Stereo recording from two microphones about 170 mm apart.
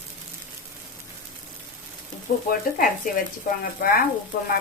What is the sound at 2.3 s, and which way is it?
Speech, 60° left (ahead or behind).